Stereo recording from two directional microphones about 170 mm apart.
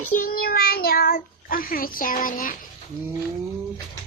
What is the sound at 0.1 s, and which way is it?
A child's voice, 55° left (ahead or behind).